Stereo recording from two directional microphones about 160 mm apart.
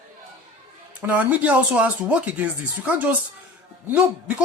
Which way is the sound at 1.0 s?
10° right (ahead or behind).